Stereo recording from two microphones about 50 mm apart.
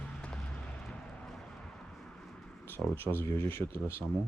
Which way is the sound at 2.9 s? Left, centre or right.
Left.